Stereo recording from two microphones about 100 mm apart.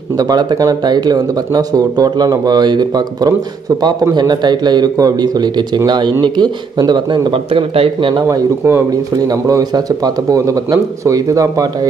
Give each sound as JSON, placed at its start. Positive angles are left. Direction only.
{"t": 0.2, "sound": "a man's voice", "side_deg": -45}
{"t": 8.1, "sound": "speech", "side_deg": -35}